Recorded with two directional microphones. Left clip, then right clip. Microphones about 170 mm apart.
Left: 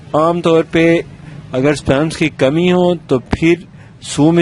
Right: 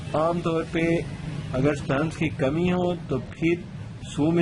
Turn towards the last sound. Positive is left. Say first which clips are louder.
# left 12 dB
turn(degrees=55)  # may be behind; listen again after turning